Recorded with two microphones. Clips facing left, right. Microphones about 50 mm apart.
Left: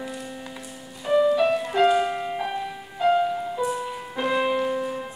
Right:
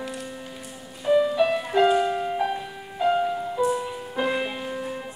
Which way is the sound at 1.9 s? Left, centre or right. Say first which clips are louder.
Even; centre.